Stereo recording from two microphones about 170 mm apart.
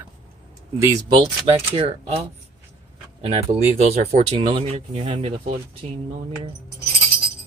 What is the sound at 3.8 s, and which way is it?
Speech, 40° right (ahead or behind).